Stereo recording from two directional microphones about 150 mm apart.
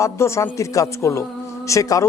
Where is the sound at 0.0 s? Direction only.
20° left (ahead or behind).